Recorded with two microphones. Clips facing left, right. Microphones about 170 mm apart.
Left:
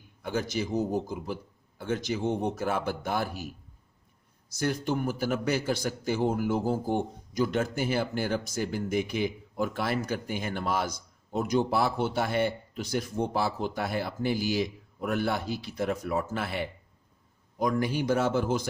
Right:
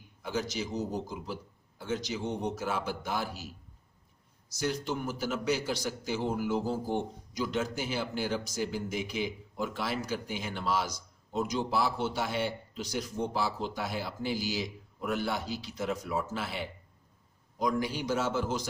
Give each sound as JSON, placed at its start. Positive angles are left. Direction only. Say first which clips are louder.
{"t": 0.2, "sound": "a man's voice", "louder": "left 3 dB", "side_deg": 55}